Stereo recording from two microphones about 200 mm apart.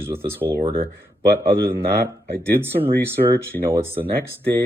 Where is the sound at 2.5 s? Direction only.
10° right (ahead or behind).